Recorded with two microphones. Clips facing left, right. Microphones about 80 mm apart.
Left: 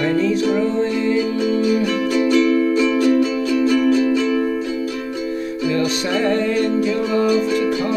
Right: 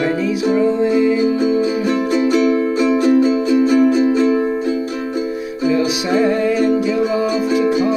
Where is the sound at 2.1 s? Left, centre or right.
Right.